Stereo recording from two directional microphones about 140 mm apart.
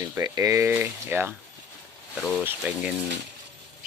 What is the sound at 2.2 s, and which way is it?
Speech, 5° left (ahead or behind).